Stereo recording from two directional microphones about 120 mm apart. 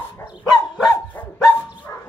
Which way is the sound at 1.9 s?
30° left (ahead or behind).